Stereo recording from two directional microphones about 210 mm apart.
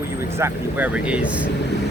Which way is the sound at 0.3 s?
10° right (ahead or behind).